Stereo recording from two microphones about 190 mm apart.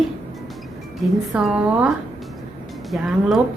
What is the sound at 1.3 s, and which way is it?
A woman's voice, 5° right (ahead or behind).